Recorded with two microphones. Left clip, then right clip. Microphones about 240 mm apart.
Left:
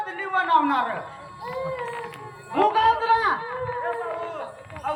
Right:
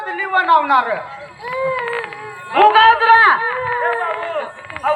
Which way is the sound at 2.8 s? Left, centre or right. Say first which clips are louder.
Right 10 dB; right.